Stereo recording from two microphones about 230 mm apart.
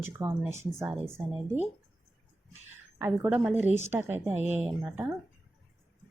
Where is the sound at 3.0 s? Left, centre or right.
Centre.